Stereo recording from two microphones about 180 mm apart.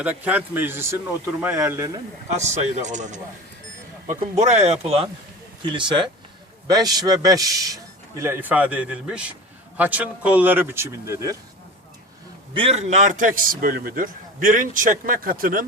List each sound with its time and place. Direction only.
0.0 s a man's voice: 10° right (ahead or behind)
2.3 s a man's voice: 40° right (ahead or behind); by 11.3 s 15° right (ahead or behind)
12.5 s a man's voice: 35° right (ahead or behind); by 15.6 s 50° right (ahead or behind)